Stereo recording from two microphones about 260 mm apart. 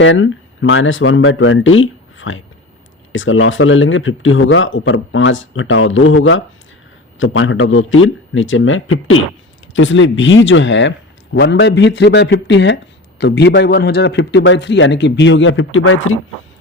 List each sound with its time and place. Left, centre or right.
0.0 s speech: left